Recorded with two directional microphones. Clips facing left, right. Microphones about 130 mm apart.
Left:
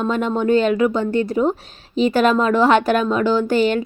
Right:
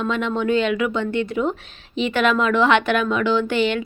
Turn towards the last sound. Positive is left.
turn(degrees=40)  # may be behind; listen again after turning